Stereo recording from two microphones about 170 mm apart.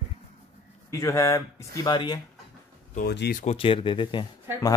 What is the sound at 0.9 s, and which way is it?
Speech, 20° left (ahead or behind).